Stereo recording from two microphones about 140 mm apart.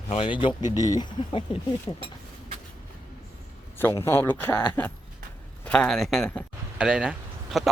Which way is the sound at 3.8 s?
15° left (ahead or behind).